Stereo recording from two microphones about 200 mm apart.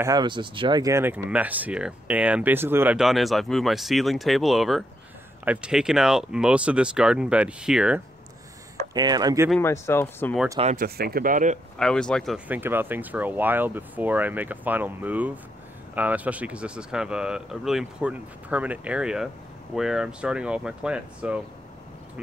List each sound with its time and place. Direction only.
0.0 s speech: 20° right (ahead or behind); by 8.0 s 5° right (ahead or behind)
8.9 s speech: 20° right (ahead or behind)
9.6 s speech: 10° left (ahead or behind)
10.6 s speech: 35° right (ahead or behind)
11.0 s speech: 50° right (ahead or behind)
11.8 s speech: 5° left (ahead or behind)
12.4 s speech: 10° right (ahead or behind)